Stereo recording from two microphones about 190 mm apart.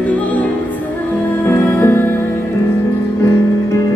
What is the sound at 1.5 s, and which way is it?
Music, 10° left (ahead or behind).